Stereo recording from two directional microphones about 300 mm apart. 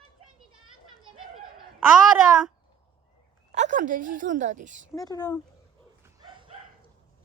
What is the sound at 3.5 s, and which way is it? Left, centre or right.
A woman's voice, right.